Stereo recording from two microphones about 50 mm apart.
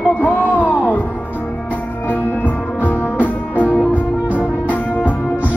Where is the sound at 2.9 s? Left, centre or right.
Left.